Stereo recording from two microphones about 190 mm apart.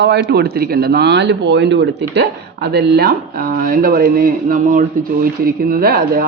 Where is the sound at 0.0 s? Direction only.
60° right (ahead or behind).